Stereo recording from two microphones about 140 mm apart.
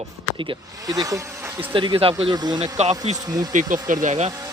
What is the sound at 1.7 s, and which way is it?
Speech, 35° right (ahead or behind).